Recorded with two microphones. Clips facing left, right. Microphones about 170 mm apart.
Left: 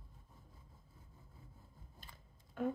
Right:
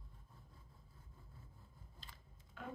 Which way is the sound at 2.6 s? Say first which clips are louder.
Left 12 dB; 50° left (ahead or behind).